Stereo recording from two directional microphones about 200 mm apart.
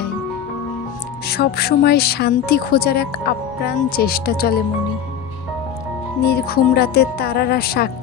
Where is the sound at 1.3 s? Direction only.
50° left (ahead or behind).